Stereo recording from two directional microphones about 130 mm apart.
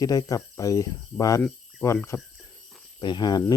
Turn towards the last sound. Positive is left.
turn(degrees=35)  # may be behind; listen again after turning